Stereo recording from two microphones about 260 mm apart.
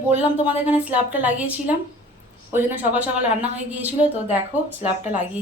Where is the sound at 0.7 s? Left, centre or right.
Centre.